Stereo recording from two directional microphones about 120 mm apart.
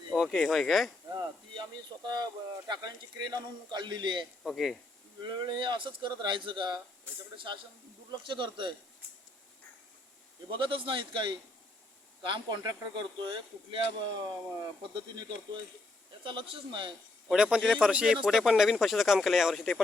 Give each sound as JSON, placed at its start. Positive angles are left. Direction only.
{"t": 0.1, "sound": "speech", "side_deg": 5}
{"t": 2.0, "sound": "speech", "side_deg": -35}
{"t": 4.4, "sound": "speech", "side_deg": 0}
{"t": 5.5, "sound": "speech", "side_deg": -40}
{"t": 10.5, "sound": "speech", "side_deg": -45}
{"t": 17.2, "sound": "speech", "side_deg": -5}